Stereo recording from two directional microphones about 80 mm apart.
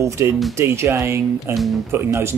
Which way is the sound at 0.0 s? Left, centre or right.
Right.